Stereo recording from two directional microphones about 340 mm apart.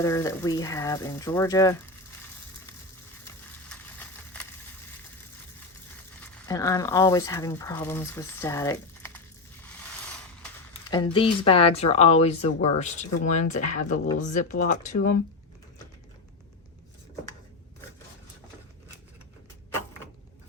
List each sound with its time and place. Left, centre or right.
0.0 s speech: centre
3.2 s a sound: centre
6.1 s speech: centre
10.9 s speech: centre